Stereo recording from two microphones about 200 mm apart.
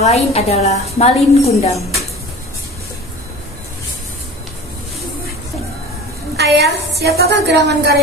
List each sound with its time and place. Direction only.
0.0 s a woman's voice: 30° left (ahead or behind)
6.3 s a woman's voice: 55° right (ahead or behind)